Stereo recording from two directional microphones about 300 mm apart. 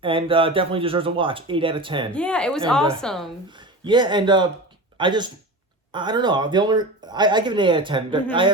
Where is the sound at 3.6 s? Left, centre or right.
Centre.